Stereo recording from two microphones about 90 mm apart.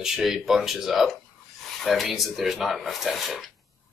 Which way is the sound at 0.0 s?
5° right (ahead or behind).